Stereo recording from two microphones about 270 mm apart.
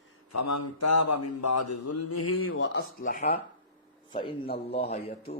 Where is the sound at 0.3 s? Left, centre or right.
Left.